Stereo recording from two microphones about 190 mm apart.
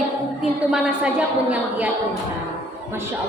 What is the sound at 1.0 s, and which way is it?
Speech, 5° right (ahead or behind).